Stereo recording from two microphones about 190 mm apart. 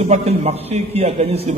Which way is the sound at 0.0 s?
35° right (ahead or behind).